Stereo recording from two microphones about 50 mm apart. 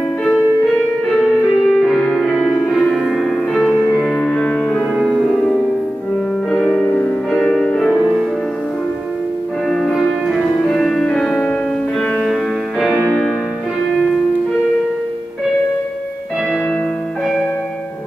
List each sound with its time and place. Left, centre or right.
1.7 s music: centre
4.1 s music: centre
4.9 s music: centre
6.5 s music: centre
9.7 s music: centre